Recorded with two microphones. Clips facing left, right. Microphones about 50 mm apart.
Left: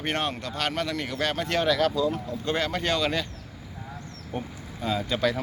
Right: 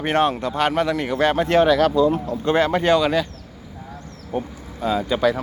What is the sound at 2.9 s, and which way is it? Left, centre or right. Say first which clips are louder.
Speech: right 8 dB; centre.